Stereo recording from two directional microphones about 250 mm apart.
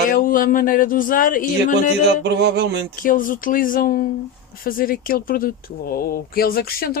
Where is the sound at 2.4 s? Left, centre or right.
Right.